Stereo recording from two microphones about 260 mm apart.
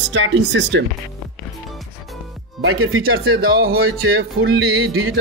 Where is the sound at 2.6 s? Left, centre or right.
Right.